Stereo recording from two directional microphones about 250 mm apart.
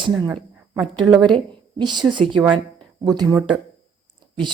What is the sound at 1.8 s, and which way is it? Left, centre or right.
Speech, centre.